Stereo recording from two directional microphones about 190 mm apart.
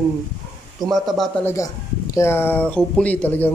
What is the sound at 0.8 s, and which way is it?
Speech, centre (ahead or behind).